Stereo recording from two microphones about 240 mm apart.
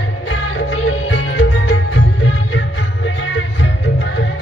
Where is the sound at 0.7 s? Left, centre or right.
Left.